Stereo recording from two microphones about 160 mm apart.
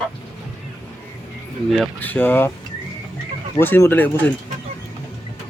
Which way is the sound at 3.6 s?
15° left (ahead or behind).